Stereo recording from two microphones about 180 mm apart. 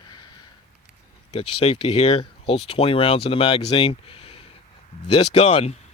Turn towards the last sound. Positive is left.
turn(degrees=35)  # may be behind; listen again after turning